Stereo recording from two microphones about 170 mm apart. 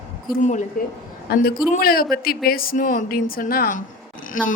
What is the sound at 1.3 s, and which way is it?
A woman's voice, 65° left (ahead or behind).